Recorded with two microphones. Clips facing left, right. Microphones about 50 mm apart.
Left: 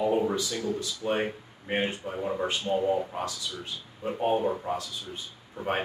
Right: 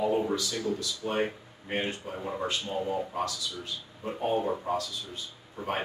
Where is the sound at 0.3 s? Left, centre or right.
Left.